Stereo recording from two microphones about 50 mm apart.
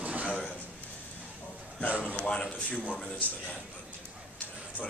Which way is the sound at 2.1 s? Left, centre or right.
Centre.